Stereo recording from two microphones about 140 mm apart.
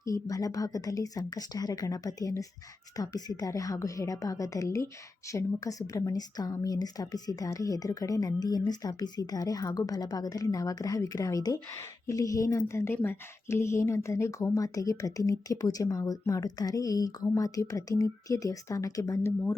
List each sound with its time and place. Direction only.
0.0 s a woman's voice: 25° left (ahead or behind)